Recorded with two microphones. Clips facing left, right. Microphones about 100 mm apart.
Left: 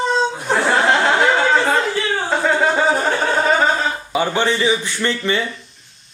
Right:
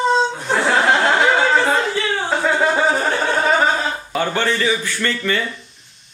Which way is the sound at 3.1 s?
5° left (ahead or behind).